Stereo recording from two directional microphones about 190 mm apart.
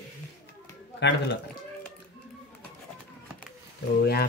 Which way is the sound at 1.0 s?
65° left (ahead or behind).